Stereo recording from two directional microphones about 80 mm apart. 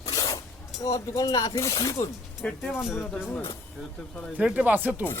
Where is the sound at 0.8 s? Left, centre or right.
Left.